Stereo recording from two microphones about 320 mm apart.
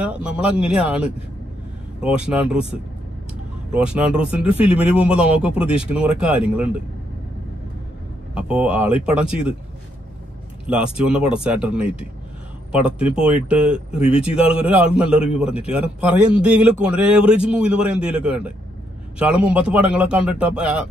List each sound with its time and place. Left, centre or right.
0.0 s a man's voice: centre
8.4 s a man's voice: centre
10.7 s a man's voice: centre
13.9 s speech: centre
14.6 s a man's voice: centre